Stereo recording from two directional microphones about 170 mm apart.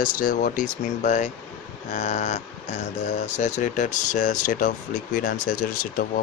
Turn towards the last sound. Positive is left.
turn(degrees=55)  # may be behind; listen again after turning